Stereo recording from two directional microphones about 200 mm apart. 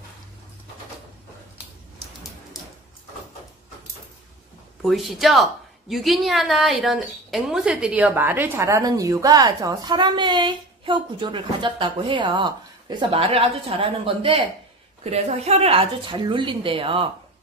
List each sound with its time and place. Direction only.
4.8 s a woman's voice: centre (ahead or behind); by 17.1 s 25° right (ahead or behind)